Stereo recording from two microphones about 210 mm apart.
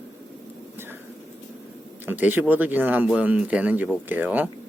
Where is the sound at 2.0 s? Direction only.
10° right (ahead or behind).